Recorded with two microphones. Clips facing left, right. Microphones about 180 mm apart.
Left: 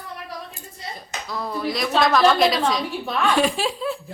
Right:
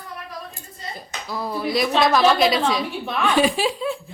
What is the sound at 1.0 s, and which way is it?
A woman's voice, 5° right (ahead or behind).